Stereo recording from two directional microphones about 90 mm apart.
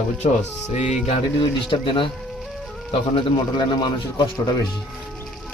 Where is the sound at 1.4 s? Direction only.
70° left (ahead or behind).